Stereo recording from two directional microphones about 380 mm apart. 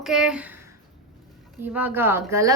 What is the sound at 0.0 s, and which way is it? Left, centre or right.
Speech, centre.